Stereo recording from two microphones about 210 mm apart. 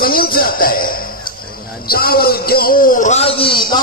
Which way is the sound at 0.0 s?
45° left (ahead or behind).